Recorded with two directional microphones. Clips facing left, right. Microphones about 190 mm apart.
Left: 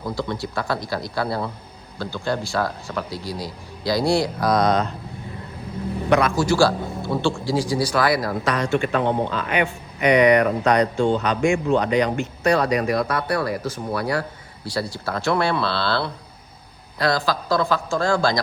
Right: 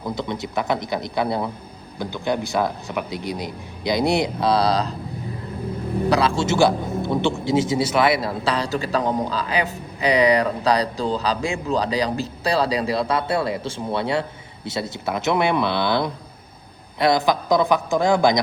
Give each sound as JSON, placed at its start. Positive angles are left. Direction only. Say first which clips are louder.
{"t": 0.2, "sound": "a man's voice", "louder": "even", "side_deg": -20}
{"t": 6.1, "sound": "a man's voice", "louder": "left 2 dB", "side_deg": -30}